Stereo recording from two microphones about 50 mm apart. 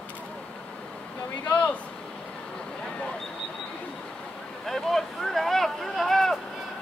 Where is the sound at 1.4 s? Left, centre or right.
Left.